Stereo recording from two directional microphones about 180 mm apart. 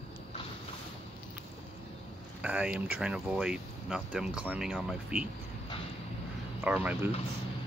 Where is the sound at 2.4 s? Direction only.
5° right (ahead or behind).